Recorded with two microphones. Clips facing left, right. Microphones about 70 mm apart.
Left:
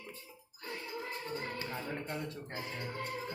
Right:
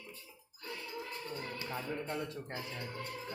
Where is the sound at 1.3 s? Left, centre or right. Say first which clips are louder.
Left 4 dB; left.